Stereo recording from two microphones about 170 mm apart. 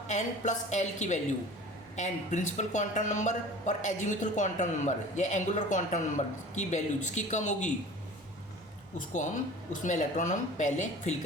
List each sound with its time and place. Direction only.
0.1 s speech: 45° left (ahead or behind)
9.8 s speech: 50° left (ahead or behind)